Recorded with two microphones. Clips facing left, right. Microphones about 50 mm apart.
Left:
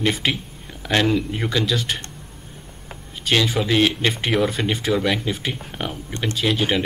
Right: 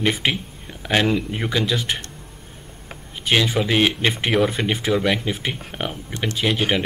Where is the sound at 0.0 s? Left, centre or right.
Centre.